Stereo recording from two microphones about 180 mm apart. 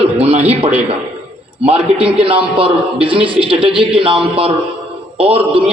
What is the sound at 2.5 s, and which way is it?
A man's voice, 30° right (ahead or behind).